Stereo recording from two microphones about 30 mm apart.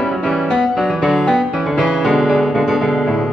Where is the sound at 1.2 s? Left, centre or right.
Right.